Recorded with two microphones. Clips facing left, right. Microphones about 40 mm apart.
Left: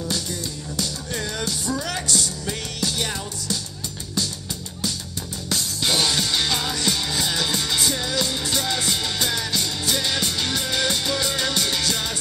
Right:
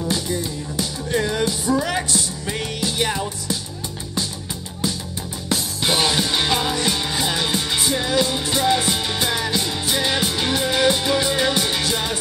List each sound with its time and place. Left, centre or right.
0.1 s music: right
5.5 s music: centre